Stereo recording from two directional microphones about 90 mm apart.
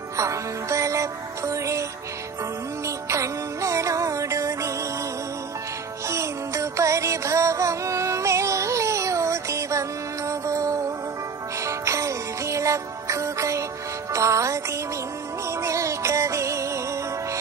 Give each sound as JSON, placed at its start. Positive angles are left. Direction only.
{"t": 0.2, "sound": "music", "side_deg": -35}
{"t": 3.1, "sound": "music", "side_deg": -35}
{"t": 6.0, "sound": "music", "side_deg": -35}
{"t": 15.6, "sound": "music", "side_deg": -35}